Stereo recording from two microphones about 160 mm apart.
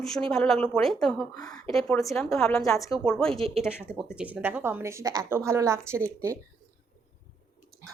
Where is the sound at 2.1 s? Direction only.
5° left (ahead or behind); by 6.4 s 20° right (ahead or behind).